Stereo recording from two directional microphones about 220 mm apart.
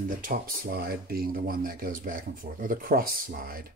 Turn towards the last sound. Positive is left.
turn(degrees=-40)  # may be behind; listen again after turning